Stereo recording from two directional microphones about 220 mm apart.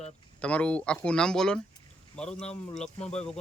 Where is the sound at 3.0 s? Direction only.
30° left (ahead or behind).